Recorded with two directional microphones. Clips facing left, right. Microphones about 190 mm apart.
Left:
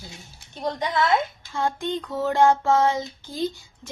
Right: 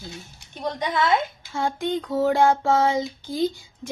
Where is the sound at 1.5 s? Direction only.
10° right (ahead or behind).